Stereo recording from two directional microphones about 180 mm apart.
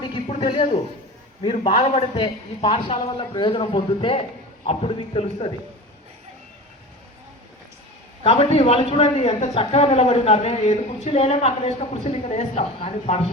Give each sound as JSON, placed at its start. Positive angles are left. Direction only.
{"t": 0.0, "sound": "a sound", "side_deg": 30}
{"t": 1.4, "sound": "a man's voice", "side_deg": 35}
{"t": 8.2, "sound": "a woman's voice", "side_deg": 35}